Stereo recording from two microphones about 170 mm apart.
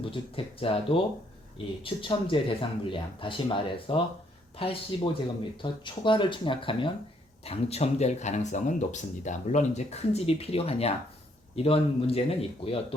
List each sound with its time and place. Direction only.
0.0 s speech: 30° left (ahead or behind)